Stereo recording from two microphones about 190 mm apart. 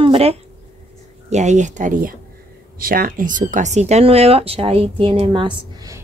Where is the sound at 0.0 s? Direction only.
30° right (ahead or behind).